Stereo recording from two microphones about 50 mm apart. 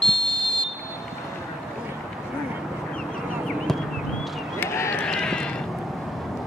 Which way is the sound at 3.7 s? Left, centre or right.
Centre.